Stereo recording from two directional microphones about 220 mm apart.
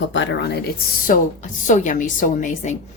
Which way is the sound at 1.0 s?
35° left (ahead or behind).